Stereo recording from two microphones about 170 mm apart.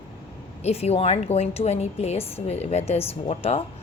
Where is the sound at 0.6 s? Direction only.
40° left (ahead or behind).